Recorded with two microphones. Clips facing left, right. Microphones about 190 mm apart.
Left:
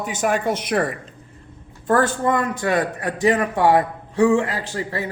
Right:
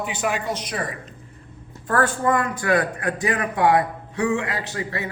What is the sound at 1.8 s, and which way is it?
Speech, 25° left (ahead or behind).